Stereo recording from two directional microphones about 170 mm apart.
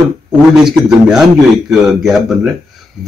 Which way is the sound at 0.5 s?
5° right (ahead or behind).